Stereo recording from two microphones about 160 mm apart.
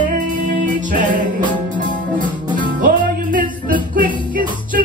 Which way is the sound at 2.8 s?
60° right (ahead or behind).